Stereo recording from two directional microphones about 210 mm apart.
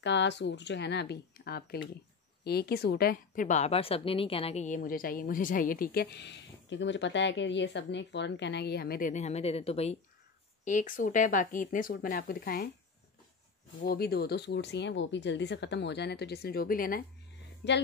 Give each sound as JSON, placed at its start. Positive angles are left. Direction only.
{"t": 0.0, "sound": "a woman's voice", "side_deg": 55}
{"t": 13.8, "sound": "a woman's voice", "side_deg": 45}
{"t": 17.6, "sound": "speech", "side_deg": 55}